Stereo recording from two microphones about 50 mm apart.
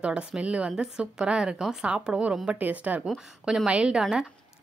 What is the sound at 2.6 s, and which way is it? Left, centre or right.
Speech, right.